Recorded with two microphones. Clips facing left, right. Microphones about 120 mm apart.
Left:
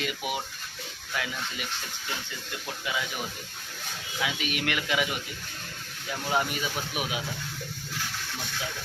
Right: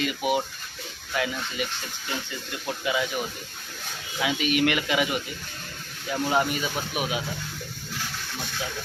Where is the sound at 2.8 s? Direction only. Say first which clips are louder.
Right 6 dB; 5° right (ahead or behind).